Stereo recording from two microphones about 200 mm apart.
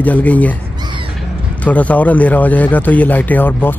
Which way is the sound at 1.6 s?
5° left (ahead or behind).